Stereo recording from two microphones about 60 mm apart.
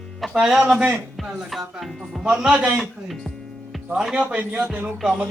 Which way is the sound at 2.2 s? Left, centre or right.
Centre.